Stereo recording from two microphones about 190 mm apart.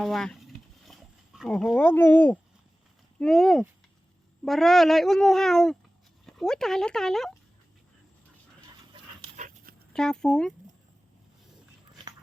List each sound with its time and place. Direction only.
0.0 s speech: centre (ahead or behind)
9.3 s dog: 40° right (ahead or behind)
9.9 s speech: 5° left (ahead or behind)